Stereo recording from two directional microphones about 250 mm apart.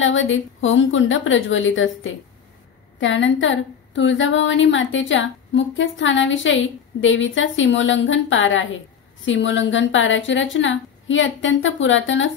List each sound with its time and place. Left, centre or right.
0.0 s a woman's voice: left